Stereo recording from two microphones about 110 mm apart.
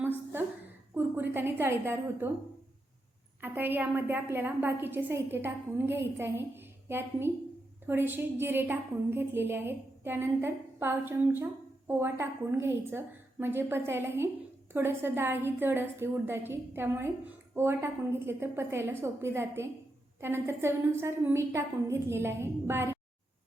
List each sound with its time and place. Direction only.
0.9 s a woman's voice: 20° right (ahead or behind)
3.4 s a woman's voice: 20° right (ahead or behind)